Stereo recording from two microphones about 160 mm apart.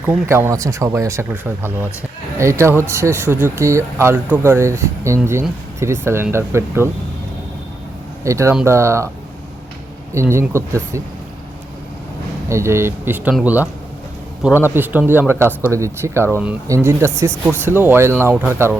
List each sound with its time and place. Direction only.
0.0 s speech: 15° right (ahead or behind)
8.2 s speech: 20° right (ahead or behind)
10.2 s speech: 15° right (ahead or behind)
12.5 s speech: 15° right (ahead or behind)